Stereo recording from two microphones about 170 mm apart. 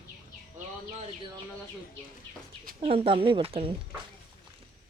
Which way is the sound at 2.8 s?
35° right (ahead or behind).